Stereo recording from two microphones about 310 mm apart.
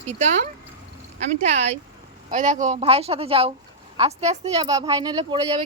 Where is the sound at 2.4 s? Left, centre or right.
Right.